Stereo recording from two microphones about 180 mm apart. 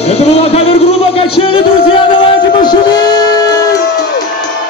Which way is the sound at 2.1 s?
25° left (ahead or behind).